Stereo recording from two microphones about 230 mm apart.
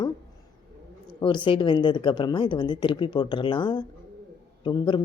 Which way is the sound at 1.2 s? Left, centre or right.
Left.